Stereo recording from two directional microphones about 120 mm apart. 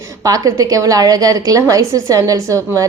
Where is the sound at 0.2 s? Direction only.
30° right (ahead or behind).